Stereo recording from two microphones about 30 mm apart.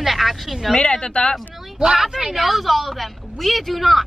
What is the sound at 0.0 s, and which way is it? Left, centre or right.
Speech, centre.